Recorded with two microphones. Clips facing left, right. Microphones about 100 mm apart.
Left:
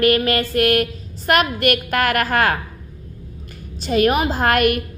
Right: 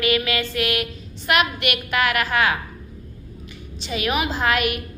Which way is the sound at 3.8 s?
45° left (ahead or behind).